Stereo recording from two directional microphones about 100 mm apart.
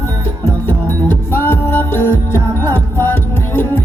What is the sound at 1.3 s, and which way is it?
Music, 20° left (ahead or behind).